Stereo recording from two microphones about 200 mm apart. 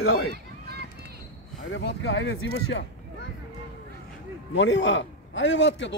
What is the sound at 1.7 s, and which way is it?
Speech, 60° left (ahead or behind).